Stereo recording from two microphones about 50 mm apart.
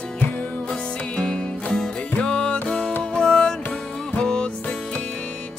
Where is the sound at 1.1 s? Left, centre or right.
Centre.